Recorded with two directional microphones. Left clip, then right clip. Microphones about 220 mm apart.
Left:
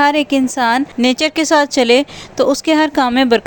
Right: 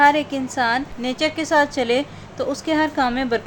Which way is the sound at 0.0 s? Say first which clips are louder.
Left 3 dB; 40° left (ahead or behind).